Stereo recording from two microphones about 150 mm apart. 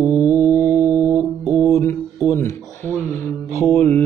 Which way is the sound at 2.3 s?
15° left (ahead or behind).